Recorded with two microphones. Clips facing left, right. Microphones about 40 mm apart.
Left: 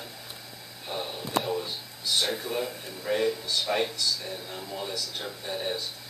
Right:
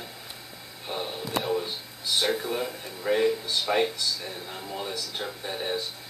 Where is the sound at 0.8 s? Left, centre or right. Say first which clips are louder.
Right 2 dB; centre.